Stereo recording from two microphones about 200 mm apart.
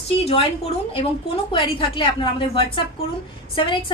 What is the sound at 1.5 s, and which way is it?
Speech, 25° left (ahead or behind).